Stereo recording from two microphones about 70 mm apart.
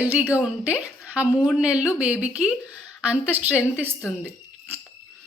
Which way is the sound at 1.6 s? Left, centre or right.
Centre.